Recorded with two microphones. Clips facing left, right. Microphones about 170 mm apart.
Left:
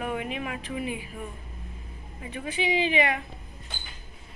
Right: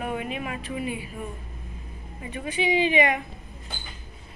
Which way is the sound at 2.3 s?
10° right (ahead or behind).